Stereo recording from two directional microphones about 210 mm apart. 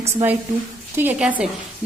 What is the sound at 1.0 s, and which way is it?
Speech, 5° right (ahead or behind).